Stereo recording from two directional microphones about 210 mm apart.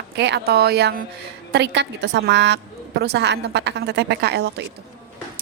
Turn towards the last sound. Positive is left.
turn(degrees=-50)  # may be behind; listen again after turning